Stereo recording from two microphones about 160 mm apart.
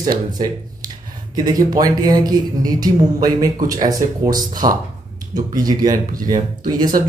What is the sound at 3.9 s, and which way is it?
Speech, 25° right (ahead or behind).